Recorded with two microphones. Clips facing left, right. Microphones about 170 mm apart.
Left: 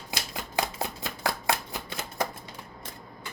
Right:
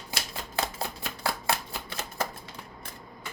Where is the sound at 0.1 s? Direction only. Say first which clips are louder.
Left 1 dB; 15° left (ahead or behind).